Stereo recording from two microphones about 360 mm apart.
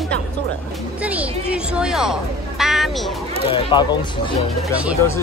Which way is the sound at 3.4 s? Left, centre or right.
Centre.